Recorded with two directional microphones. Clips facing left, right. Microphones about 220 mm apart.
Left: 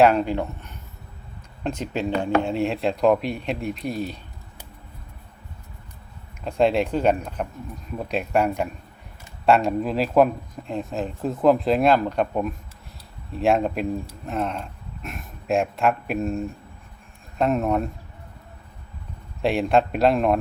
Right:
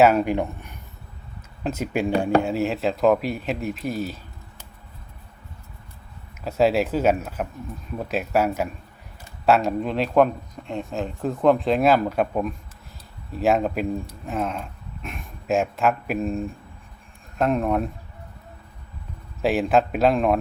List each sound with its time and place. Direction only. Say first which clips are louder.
0.0 s speech: right 1 dB; 5° right (ahead or behind)
6.4 s speech: even; 5° right (ahead or behind)
19.4 s speech: even; centre (ahead or behind)